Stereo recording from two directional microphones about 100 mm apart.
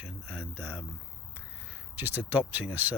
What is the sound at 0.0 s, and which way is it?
Speech, 15° right (ahead or behind).